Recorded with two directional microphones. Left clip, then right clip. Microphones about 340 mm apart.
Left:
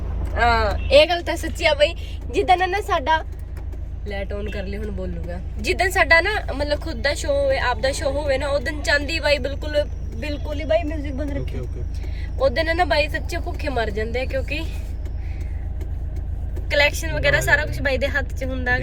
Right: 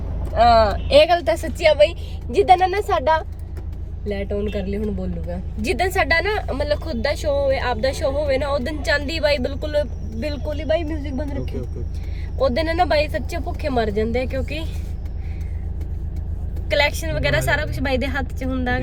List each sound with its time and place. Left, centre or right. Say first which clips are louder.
0.7 s a woman's voice: right 1 dB; centre
12.4 s a woman's voice: even; centre
16.6 s a woman's voice: even; centre